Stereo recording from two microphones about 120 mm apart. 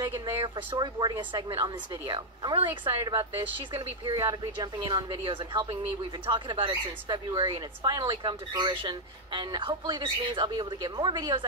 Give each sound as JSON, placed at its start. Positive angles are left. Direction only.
{"t": 0.0, "sound": "speech", "side_deg": -25}
{"t": 0.4, "sound": "speech", "side_deg": -45}
{"t": 2.4, "sound": "speech", "side_deg": -45}
{"t": 2.9, "sound": "speech", "side_deg": -30}